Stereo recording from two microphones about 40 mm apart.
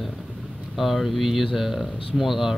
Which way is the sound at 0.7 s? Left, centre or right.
Centre.